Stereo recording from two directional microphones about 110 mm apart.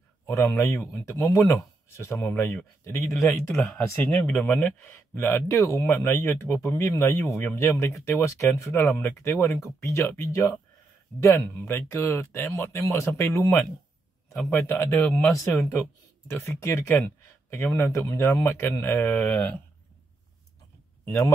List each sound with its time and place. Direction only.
0.3 s speech: 25° left (ahead or behind)
3.5 s speech: 5° left (ahead or behind)
16.3 s speech: 25° left (ahead or behind)